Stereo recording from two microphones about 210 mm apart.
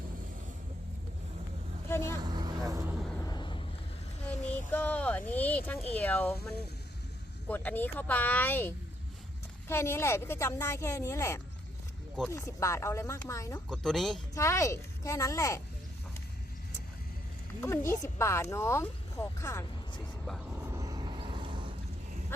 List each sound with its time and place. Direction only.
1.9 s vehicle: 10° left (ahead or behind)
2.2 s vehicle: 20° right (ahead or behind)
3.0 s vehicle: 5° left (ahead or behind)
3.2 s vehicle: 20° left (ahead or behind)
4.7 s speech: 5° left (ahead or behind)
7.4 s speech: 10° left (ahead or behind)
13.7 s speech: centre (ahead or behind)
14.3 s speech: 15° left (ahead or behind)
17.6 s speech: 15° left (ahead or behind)
20.6 s vehicle: 15° right (ahead or behind)